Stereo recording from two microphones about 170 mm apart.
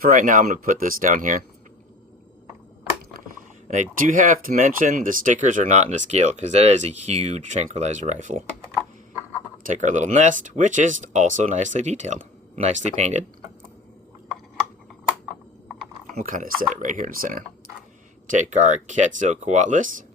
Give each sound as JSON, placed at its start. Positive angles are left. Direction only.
{"t": 0.0, "sound": "speech", "side_deg": -50}
{"t": 3.7, "sound": "speech", "side_deg": -50}
{"t": 9.6, "sound": "speech", "side_deg": -45}
{"t": 16.1, "sound": "speech", "side_deg": -50}